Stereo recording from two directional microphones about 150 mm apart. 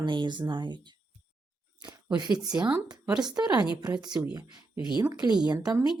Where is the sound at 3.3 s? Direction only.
25° right (ahead or behind).